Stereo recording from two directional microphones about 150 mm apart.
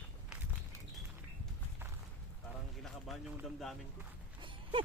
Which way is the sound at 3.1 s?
Centre (ahead or behind).